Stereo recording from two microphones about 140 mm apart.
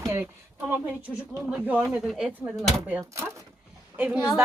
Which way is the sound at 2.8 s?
15° right (ahead or behind).